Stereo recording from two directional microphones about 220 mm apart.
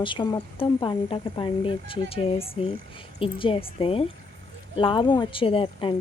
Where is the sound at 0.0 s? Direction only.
20° left (ahead or behind).